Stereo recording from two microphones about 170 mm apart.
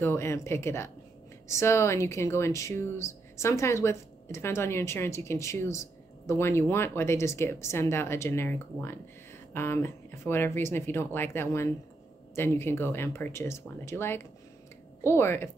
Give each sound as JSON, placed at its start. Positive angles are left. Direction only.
{"t": 0.0, "sound": "speech", "side_deg": 15}